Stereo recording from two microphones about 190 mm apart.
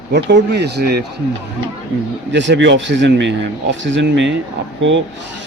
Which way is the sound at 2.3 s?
70° right (ahead or behind).